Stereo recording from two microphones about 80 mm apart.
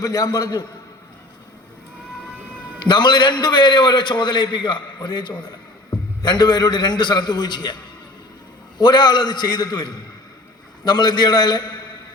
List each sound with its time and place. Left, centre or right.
0.0 s a man's voice: left
2.8 s a man's voice: left
8.8 s a man's voice: left